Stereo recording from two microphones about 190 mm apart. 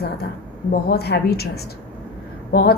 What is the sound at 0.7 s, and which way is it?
A woman's voice, 55° left (ahead or behind).